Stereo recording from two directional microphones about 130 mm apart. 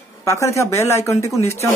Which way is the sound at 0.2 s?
20° left (ahead or behind).